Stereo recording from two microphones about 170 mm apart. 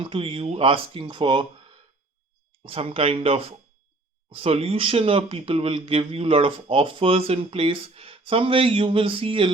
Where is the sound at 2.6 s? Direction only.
35° right (ahead or behind).